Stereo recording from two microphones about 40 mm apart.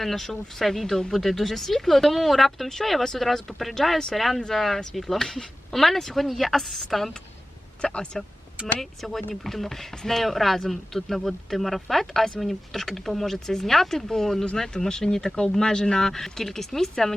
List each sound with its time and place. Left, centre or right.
0.0 s speech: centre
7.8 s speech: left
8.6 s speech: centre